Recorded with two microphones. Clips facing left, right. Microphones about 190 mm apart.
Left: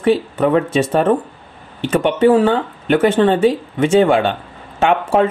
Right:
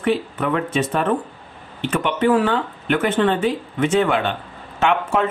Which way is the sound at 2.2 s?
30° left (ahead or behind).